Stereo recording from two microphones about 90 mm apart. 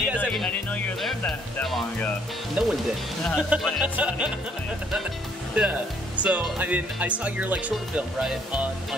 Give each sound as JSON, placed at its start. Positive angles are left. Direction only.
{"t": 1.0, "sound": "speech", "side_deg": 5}
{"t": 2.6, "sound": "speech", "side_deg": -15}
{"t": 5.5, "sound": "speech", "side_deg": -15}